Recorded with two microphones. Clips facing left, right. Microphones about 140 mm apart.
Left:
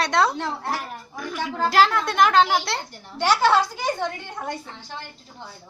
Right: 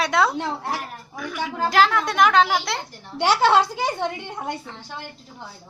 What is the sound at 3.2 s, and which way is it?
A woman's voice, 25° right (ahead or behind).